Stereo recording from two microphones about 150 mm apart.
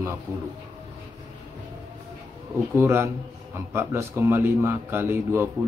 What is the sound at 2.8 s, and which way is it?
Speech, 15° right (ahead or behind).